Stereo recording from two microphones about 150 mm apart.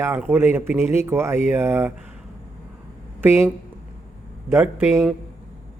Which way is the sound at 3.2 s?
15° right (ahead or behind).